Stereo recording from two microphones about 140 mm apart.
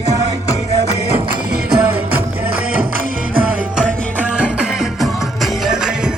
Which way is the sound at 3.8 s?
10° right (ahead or behind).